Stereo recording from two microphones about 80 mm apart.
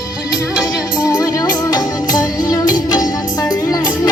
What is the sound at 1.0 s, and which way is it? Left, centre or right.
Music, left.